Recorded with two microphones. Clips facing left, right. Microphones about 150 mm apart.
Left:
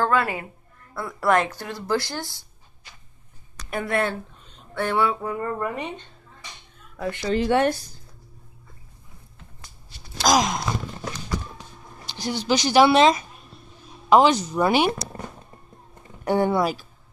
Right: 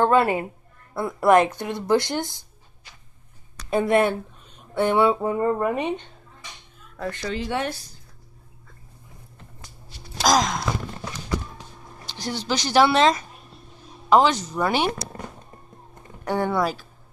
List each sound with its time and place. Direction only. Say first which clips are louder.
0.0 s speech: right 4 dB; 25° right (ahead or behind)
3.7 s speech: right 5 dB; 20° right (ahead or behind)
7.0 s speech: left 1 dB; 15° left (ahead or behind)
7.3 s speech: left 10 dB; 55° left (ahead or behind)
10.3 s a sound: left 1 dB; 10° left (ahead or behind)
12.1 s speech: left 3 dB; 10° left (ahead or behind)
16.3 s speech: left 2 dB; 15° left (ahead or behind)